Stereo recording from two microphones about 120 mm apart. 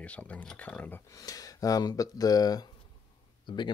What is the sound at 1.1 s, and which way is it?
Speech, 30° left (ahead or behind).